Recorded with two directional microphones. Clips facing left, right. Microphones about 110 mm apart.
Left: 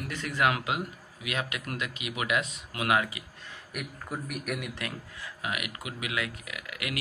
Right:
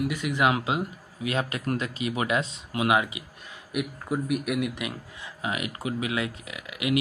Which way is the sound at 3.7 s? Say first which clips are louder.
Right 8 dB; 5° right (ahead or behind).